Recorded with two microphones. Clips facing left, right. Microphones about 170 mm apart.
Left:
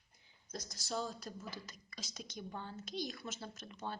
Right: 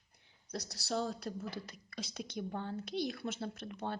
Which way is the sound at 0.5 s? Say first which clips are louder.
Right 4 dB; 70° right (ahead or behind).